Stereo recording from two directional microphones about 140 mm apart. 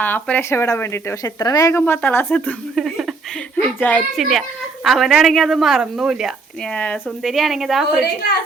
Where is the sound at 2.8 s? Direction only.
5° right (ahead or behind).